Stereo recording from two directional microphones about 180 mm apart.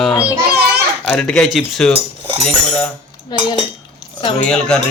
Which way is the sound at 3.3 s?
20° left (ahead or behind).